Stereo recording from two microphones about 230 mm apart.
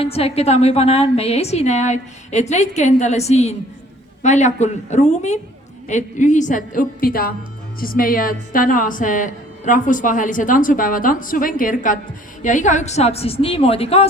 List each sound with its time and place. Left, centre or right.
0.0 s a woman's voice: left